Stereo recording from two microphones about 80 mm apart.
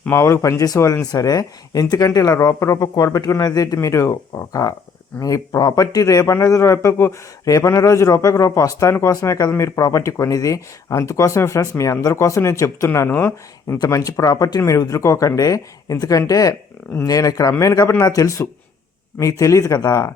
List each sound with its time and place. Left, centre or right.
0.1 s speech: left
3.8 s speech: left
13.7 s speech: left